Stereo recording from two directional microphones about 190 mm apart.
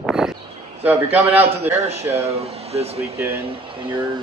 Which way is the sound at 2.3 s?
30° right (ahead or behind).